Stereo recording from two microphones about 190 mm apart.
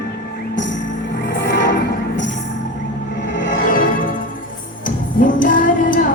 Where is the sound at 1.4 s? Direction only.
70° left (ahead or behind).